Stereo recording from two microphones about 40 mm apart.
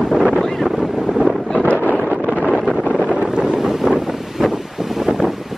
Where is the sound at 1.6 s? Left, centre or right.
Left.